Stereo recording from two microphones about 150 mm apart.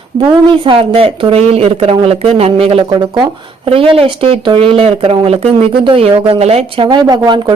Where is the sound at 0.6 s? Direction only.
35° right (ahead or behind).